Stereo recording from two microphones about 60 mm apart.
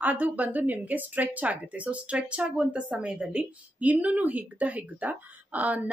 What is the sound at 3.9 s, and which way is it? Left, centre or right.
Speech, right.